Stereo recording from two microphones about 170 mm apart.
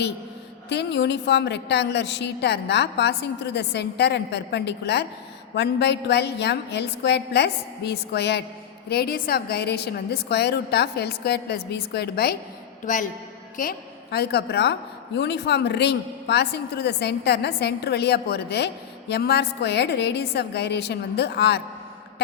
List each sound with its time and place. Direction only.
0.7 s a woman's voice: 90° left
5.5 s a woman's voice: 90° left
8.9 s a woman's voice: 65° left (ahead or behind)
12.8 s speech: 50° left (ahead or behind)
13.6 s a woman's voice: 65° left (ahead or behind)